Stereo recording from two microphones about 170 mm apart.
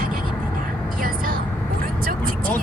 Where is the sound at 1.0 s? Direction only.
55° right (ahead or behind).